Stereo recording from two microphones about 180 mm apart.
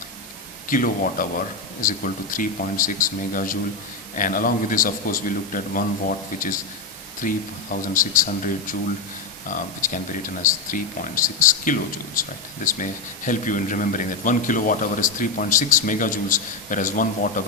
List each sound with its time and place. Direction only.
0.7 s a man's voice: 50° left (ahead or behind)